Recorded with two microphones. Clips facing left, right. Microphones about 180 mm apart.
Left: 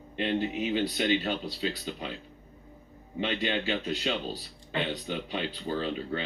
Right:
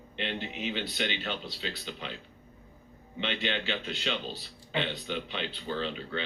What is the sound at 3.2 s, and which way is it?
Speech, 40° left (ahead or behind).